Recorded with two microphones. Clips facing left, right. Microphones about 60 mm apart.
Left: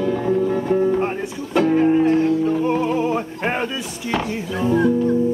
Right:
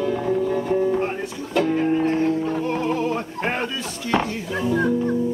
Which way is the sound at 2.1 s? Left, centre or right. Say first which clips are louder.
Left 4 dB; right.